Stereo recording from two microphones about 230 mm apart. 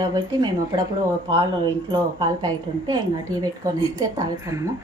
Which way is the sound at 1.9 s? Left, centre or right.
Centre.